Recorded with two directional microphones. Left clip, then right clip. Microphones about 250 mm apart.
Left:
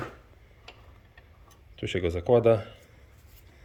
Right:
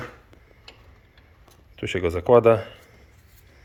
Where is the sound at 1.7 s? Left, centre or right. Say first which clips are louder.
Right 4 dB; centre.